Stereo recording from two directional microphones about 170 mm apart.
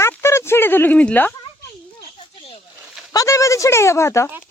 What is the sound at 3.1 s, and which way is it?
A woman's voice, 20° left (ahead or behind).